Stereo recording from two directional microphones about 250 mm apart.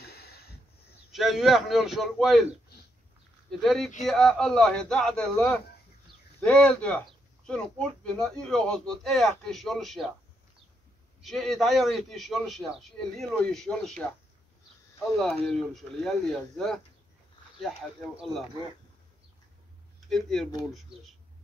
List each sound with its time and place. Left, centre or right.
0.0 s a sound: left
1.1 s a man's voice: centre
3.6 s a man's voice: centre
11.2 s a man's voice: centre
15.1 s a man's voice: centre
20.1 s a man's voice: centre